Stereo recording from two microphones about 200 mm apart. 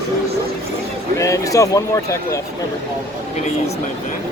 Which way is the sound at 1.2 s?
15° left (ahead or behind).